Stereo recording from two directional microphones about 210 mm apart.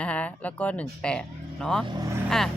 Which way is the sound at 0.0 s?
5° left (ahead or behind).